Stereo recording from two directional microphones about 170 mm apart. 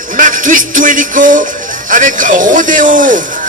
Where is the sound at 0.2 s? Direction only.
50° right (ahead or behind).